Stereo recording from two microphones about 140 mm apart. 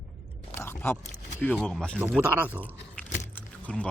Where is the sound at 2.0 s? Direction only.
10° right (ahead or behind).